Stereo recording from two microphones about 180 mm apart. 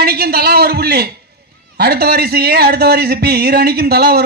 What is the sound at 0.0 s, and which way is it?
A man's voice, 60° right (ahead or behind).